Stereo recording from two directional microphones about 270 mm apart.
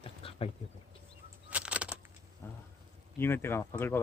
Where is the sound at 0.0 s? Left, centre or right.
Left.